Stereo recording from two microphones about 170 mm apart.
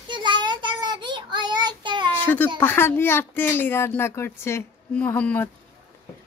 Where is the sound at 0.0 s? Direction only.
25° right (ahead or behind).